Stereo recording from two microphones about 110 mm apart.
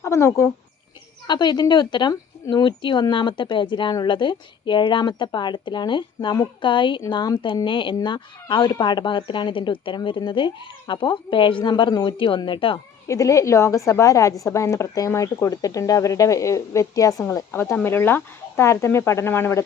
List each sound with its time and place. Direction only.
0.0 s speech: 25° left (ahead or behind)
1.3 s speech: 40° left (ahead or behind)
6.1 s speech: 30° left (ahead or behind)
6.4 s speech: 50° left (ahead or behind)
13.1 s a woman's voice: 30° left (ahead or behind)
17.5 s a woman's voice: 20° left (ahead or behind)